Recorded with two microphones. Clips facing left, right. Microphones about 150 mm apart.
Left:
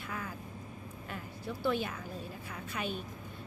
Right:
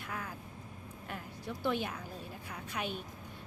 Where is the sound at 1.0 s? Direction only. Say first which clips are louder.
Left 1 dB; 15° right (ahead or behind).